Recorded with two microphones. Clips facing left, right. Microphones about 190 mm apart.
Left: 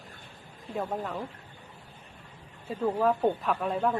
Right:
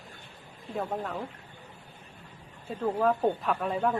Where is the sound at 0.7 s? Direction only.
5° left (ahead or behind).